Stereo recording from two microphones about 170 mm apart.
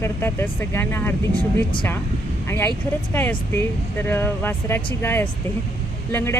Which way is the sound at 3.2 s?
10° left (ahead or behind).